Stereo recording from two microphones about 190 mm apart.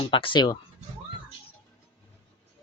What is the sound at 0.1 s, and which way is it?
Speech, 25° left (ahead or behind).